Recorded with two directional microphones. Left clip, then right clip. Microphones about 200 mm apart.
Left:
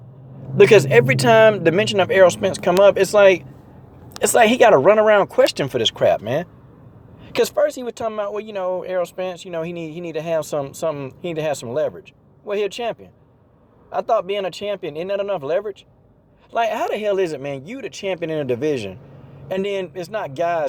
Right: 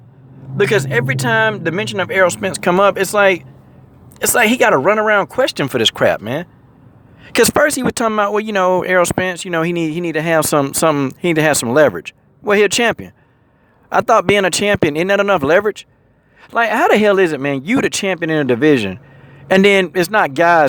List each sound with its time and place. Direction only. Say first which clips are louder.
0.5 s speech: left 4 dB; centre (ahead or behind); by 2.9 s 30° right (ahead or behind)
2.9 s speech: even; 15° right (ahead or behind)
5.6 s speech: right 3 dB; 30° right (ahead or behind)